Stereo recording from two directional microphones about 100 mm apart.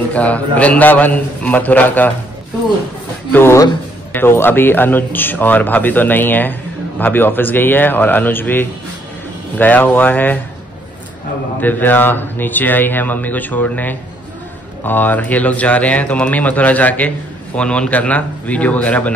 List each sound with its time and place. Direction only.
0.1 s speech: 15° left (ahead or behind)
3.3 s speech: 25° left (ahead or behind)
11.6 s speech: 20° left (ahead or behind)